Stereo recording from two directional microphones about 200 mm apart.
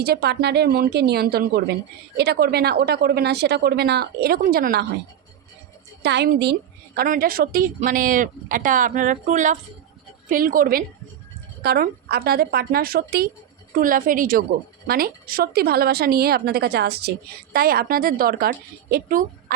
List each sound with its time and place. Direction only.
0.0 s a woman's voice: 55° right (ahead or behind)
6.0 s a woman's voice: 55° right (ahead or behind)